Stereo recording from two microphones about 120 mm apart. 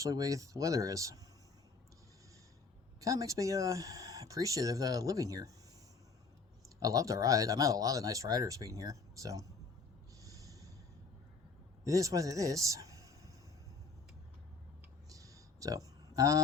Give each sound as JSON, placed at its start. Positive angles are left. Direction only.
{"t": 0.0, "sound": "speech", "side_deg": -30}
{"t": 3.0, "sound": "speech", "side_deg": -30}
{"t": 6.7, "sound": "speech", "side_deg": -30}
{"t": 10.2, "sound": "snort", "side_deg": -30}
{"t": 11.9, "sound": "a man's voice", "side_deg": -30}
{"t": 15.1, "sound": "a sound", "side_deg": -30}
{"t": 16.1, "sound": "speech", "side_deg": -30}